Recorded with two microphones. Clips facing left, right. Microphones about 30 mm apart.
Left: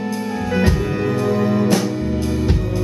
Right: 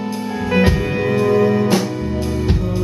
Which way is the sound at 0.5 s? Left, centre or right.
Right.